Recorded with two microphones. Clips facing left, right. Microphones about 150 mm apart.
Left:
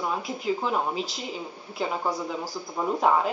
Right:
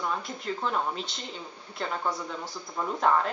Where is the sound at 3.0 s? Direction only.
5° left (ahead or behind).